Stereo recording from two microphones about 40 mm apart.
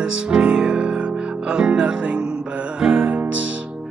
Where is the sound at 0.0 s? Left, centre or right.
Right.